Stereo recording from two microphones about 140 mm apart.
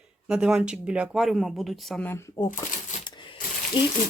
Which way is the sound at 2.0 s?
20° left (ahead or behind).